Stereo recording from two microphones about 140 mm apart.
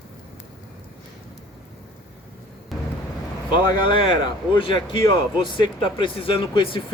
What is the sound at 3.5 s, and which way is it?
Speech, 35° left (ahead or behind).